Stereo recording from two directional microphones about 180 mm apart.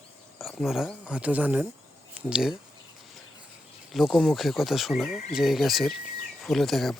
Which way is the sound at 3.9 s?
Centre (ahead or behind).